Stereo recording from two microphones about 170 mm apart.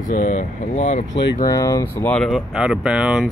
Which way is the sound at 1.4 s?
20° left (ahead or behind).